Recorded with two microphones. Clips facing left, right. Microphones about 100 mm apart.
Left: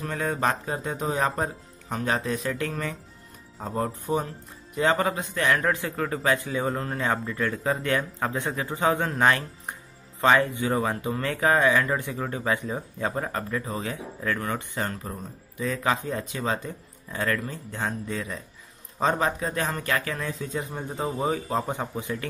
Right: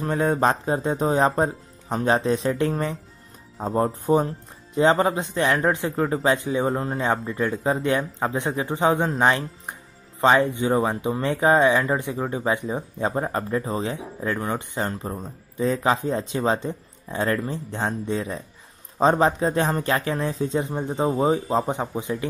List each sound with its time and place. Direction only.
0.0 s speech: 30° right (ahead or behind)